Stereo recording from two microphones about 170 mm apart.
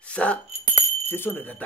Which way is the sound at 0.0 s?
5° left (ahead or behind).